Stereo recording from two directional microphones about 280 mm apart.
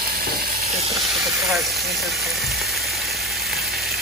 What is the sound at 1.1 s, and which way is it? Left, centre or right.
Vehicle, centre.